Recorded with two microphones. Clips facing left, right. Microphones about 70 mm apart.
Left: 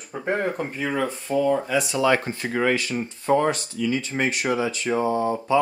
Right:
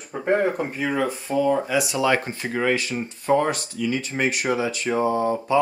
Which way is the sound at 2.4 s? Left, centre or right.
Left.